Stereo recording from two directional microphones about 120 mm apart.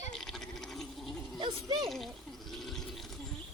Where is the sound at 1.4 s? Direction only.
45° right (ahead or behind).